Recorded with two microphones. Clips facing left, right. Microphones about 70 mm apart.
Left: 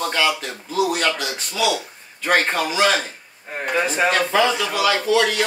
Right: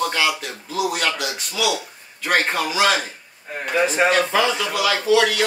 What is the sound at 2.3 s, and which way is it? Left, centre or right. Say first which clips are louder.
Speech: left 1 dB; centre.